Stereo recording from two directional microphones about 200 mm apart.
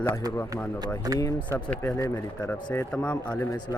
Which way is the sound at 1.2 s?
5° left (ahead or behind).